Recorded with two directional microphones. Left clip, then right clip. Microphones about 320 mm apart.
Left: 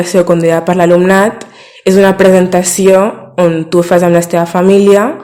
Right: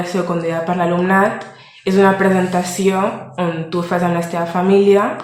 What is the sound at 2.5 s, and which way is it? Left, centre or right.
Speech, left.